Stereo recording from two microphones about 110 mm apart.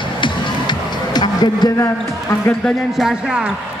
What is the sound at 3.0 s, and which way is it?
Speech, 5° right (ahead or behind).